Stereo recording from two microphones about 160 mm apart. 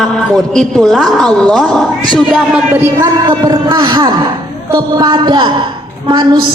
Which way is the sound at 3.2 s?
30° right (ahead or behind).